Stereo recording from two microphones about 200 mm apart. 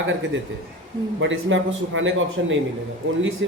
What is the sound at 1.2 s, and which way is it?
Speech, 70° right (ahead or behind).